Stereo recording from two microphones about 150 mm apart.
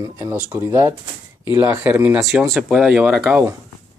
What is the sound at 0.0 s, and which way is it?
Speech, 20° right (ahead or behind).